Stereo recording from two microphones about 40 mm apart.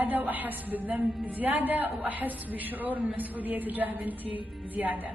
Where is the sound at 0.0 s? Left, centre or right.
Right.